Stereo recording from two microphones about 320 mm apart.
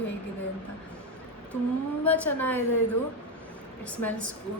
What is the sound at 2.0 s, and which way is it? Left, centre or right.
Speech, centre.